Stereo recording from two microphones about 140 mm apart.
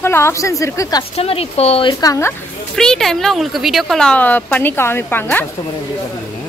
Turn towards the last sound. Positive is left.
turn(degrees=15)  # may be behind; listen again after turning